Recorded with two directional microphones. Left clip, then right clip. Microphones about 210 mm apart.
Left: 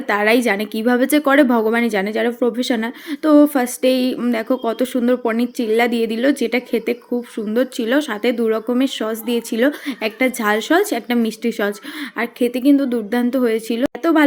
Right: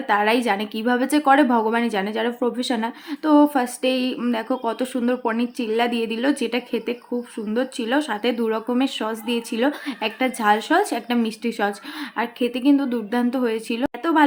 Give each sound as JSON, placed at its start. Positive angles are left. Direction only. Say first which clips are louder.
{"t": 0.1, "sound": "a woman's voice", "louder": "left 3 dB", "side_deg": 15}